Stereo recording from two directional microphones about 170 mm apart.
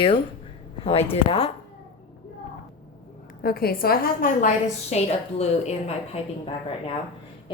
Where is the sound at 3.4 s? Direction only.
60° left (ahead or behind).